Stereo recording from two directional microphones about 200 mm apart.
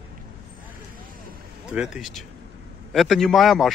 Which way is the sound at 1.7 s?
Centre (ahead or behind).